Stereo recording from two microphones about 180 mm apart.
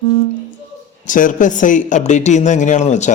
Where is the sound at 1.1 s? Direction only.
45° left (ahead or behind).